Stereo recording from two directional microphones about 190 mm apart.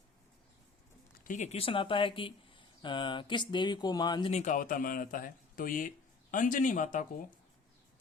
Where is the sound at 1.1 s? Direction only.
45° left (ahead or behind); by 4.3 s 20° left (ahead or behind).